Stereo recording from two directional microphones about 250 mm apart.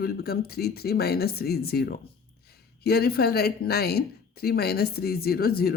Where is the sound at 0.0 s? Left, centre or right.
Left.